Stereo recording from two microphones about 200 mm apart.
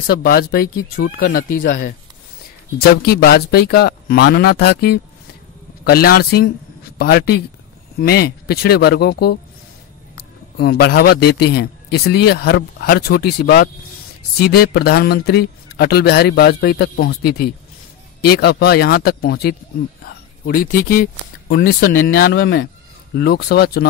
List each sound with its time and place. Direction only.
0.0 s a man's voice: 50° left (ahead or behind)